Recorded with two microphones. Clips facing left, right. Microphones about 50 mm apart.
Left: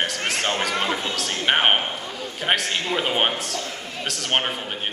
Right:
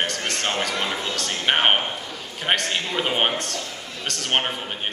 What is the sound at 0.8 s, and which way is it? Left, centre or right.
Speech, centre.